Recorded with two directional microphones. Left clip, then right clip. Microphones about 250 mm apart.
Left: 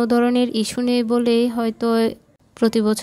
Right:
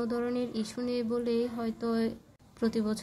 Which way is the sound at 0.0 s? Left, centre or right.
Left.